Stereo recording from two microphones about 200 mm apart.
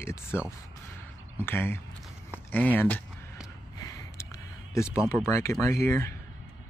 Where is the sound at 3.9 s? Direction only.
15° left (ahead or behind).